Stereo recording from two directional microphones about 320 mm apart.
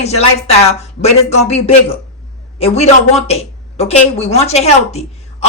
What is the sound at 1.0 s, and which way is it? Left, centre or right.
A woman's voice, centre.